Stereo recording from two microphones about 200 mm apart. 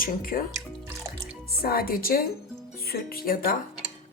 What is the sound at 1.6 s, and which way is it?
Speech, 50° left (ahead or behind).